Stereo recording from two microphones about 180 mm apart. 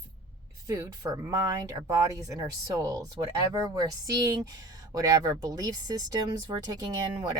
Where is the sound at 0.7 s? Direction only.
20° right (ahead or behind).